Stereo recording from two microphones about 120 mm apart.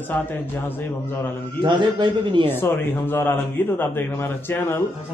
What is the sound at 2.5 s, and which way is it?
Speech, 20° left (ahead or behind).